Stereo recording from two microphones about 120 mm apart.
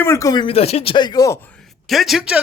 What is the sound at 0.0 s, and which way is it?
Speech, 25° left (ahead or behind).